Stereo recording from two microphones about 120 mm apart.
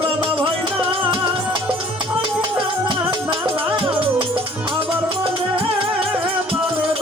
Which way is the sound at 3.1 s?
45° right (ahead or behind).